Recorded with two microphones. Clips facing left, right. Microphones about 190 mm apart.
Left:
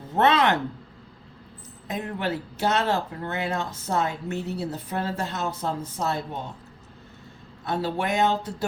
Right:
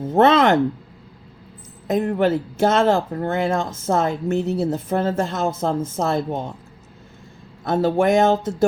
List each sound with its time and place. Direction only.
0.0 s speech: 45° right (ahead or behind)
2.1 s speech: 50° right (ahead or behind)
7.6 s speech: 50° right (ahead or behind)